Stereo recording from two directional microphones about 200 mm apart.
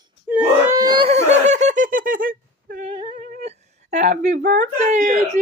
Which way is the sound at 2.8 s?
25° right (ahead or behind).